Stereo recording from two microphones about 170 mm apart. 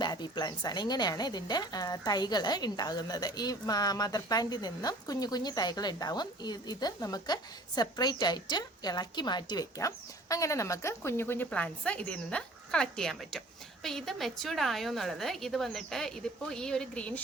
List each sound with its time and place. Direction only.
0.0 s a woman's voice: 25° left (ahead or behind); by 17.2 s 5° left (ahead or behind)